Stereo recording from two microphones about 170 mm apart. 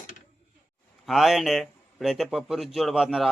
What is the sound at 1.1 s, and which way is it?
A man's voice, centre (ahead or behind).